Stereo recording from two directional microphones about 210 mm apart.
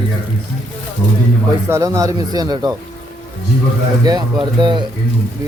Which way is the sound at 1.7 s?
15° right (ahead or behind).